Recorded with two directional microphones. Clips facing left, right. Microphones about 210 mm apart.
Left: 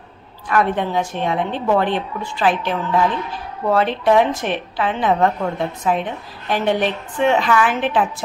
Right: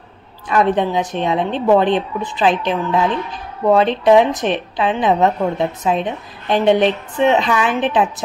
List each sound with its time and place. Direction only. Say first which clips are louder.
0.5 s a woman's voice: right 3 dB; 20° right (ahead or behind)